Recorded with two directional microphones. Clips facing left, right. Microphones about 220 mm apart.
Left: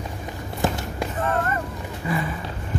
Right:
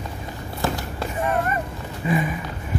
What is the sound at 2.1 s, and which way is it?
Run, 15° right (ahead or behind).